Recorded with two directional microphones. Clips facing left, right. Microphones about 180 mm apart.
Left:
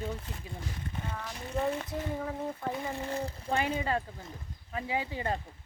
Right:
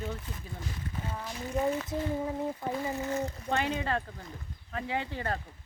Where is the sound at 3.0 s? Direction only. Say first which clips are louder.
Right 2 dB; 30° left (ahead or behind).